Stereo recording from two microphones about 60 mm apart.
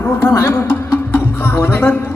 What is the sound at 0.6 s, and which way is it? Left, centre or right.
Music, left.